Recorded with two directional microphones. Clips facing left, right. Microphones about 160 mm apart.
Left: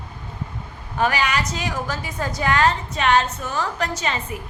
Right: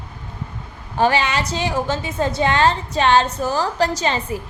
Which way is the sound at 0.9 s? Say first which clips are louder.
Right 3 dB; 30° right (ahead or behind).